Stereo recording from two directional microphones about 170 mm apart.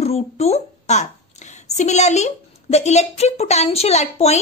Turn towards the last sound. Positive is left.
turn(degrees=40)  # may be behind; listen again after turning